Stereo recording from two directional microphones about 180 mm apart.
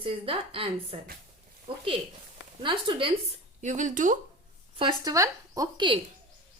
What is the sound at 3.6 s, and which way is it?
Speech, 45° right (ahead or behind).